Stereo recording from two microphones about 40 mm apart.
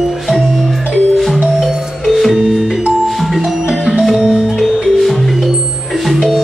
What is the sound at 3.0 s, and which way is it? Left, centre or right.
Music, centre.